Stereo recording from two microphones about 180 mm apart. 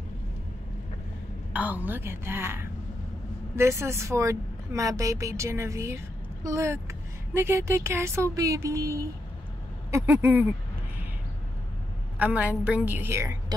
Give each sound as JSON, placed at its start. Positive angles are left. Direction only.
{"t": 1.5, "sound": "speech", "side_deg": -10}
{"t": 12.2, "sound": "speech", "side_deg": -10}